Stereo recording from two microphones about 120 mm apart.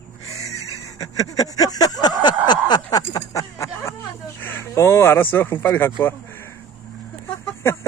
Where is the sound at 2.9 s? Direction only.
30° left (ahead or behind).